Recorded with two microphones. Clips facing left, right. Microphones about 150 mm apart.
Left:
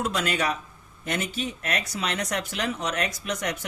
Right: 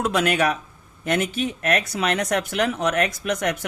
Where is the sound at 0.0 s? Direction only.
60° right (ahead or behind).